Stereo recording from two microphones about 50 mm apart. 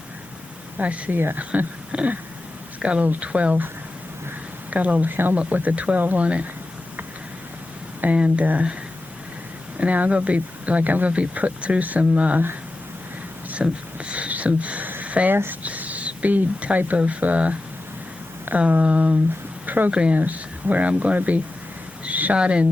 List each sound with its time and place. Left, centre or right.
0.8 s speech: right
1.1 s speech: right
1.9 s speech: right
4.7 s speech: right
8.0 s speech: right
9.7 s speech: right
13.5 s speech: right
15.3 s speech: right
15.6 s speech: right
19.6 s a sound: right
19.9 s speech: right
20.1 s speech: right
22.0 s a sound: right
22.4 s speech: right